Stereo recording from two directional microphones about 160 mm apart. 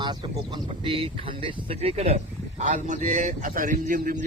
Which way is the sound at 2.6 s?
50° right (ahead or behind).